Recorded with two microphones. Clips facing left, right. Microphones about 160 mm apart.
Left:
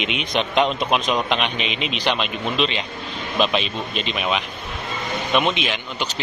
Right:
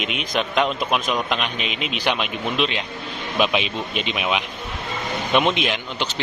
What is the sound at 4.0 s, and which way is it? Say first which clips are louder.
Speech: even; 10° right (ahead or behind).